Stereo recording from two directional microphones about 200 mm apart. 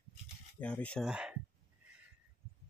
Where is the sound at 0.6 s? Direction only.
5° left (ahead or behind).